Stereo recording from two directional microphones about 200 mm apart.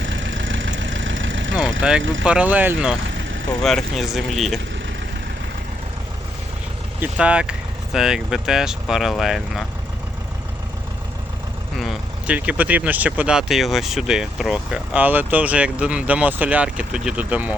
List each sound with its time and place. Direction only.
0.0 s vehicle: 70° right (ahead or behind)
2.0 s speech: 70° right (ahead or behind)
2.2 s speech: 5° right (ahead or behind)
7.0 s speech: 5° right (ahead or behind)
11.8 s speech: 5° right (ahead or behind)